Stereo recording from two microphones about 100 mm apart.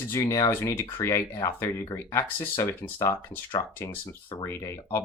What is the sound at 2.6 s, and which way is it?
Speech, 20° left (ahead or behind).